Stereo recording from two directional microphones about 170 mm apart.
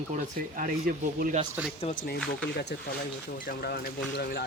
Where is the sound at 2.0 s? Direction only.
65° left (ahead or behind).